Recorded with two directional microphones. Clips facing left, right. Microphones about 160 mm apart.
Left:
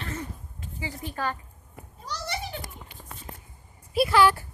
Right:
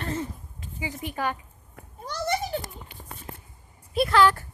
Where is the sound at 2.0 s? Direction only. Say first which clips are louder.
Right 6 dB; 50° right (ahead or behind).